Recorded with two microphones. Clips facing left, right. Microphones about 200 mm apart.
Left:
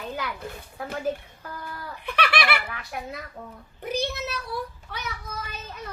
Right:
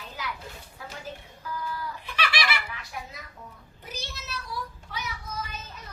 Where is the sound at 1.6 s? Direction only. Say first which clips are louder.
Even; 60° left (ahead or behind).